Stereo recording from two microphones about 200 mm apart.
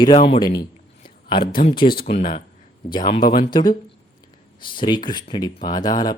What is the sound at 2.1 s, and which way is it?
Speech, 40° left (ahead or behind).